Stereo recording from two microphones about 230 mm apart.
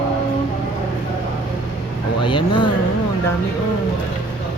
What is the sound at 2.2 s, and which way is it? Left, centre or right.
Vehicle, left.